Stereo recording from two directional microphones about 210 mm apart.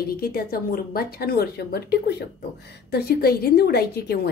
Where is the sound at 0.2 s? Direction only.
45° left (ahead or behind).